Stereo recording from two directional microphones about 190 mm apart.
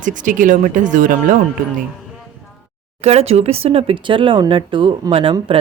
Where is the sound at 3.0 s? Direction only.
35° right (ahead or behind).